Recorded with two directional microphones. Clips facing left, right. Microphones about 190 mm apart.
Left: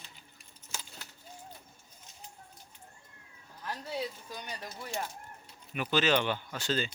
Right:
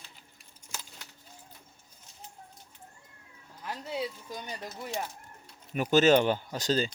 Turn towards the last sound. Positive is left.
turn(degrees=-40)  # may be behind; listen again after turning